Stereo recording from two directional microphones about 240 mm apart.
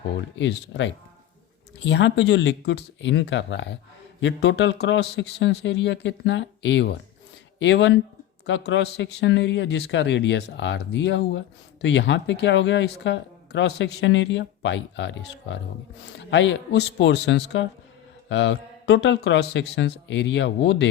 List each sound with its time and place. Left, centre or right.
0.3 s speech: left